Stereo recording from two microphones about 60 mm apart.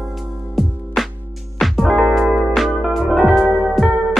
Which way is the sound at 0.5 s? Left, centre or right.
Centre.